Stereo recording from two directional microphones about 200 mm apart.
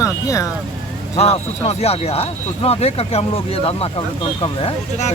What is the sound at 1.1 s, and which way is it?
Speech, 30° left (ahead or behind).